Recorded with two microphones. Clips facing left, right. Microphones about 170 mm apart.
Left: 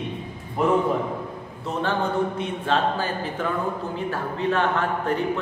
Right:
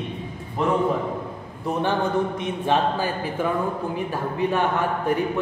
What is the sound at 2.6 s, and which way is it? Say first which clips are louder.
A man's voice: right 2 dB; 15° right (ahead or behind).